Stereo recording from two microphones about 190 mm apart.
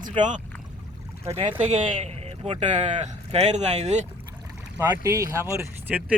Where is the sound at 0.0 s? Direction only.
40° right (ahead or behind).